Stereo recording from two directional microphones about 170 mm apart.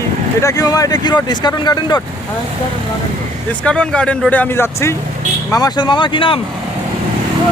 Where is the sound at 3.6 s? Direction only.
5° left (ahead or behind).